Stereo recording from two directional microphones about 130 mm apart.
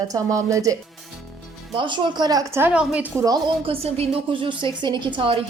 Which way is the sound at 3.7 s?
50° right (ahead or behind).